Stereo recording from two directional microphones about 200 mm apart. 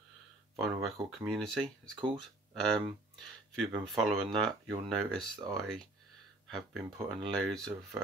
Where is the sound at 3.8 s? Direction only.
Centre (ahead or behind).